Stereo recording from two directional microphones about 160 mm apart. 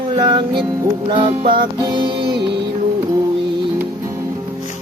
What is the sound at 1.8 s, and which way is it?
Music, 25° right (ahead or behind).